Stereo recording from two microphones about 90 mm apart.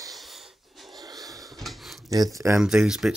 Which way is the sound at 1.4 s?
Centre (ahead or behind).